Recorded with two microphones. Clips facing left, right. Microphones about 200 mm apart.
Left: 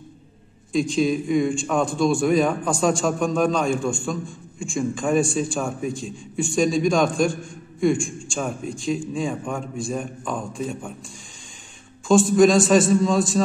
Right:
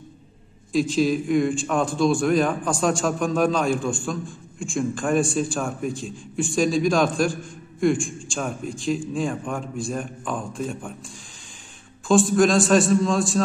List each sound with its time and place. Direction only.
0.7 s a man's voice: centre (ahead or behind)
12.1 s a man's voice: centre (ahead or behind)